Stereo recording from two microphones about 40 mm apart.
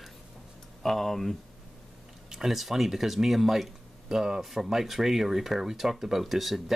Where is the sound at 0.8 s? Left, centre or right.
Centre.